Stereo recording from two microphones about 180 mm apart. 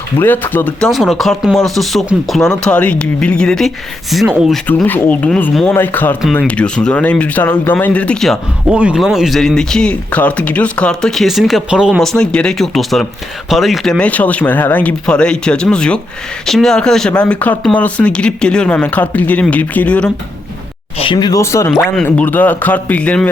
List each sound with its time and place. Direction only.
0.2 s speech: 10° left (ahead or behind)
4.6 s speech: 10° left (ahead or behind)
21.0 s speech: 25° left (ahead or behind); by 23.3 s 5° left (ahead or behind)